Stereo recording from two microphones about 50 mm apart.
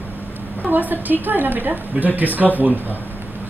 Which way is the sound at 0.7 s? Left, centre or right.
Right.